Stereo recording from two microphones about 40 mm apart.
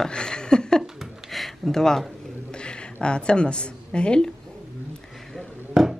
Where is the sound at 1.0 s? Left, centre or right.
Centre.